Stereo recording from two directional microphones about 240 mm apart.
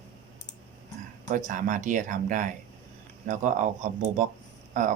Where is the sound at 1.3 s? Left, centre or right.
Right.